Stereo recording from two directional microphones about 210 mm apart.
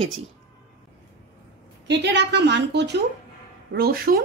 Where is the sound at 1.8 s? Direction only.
55° right (ahead or behind).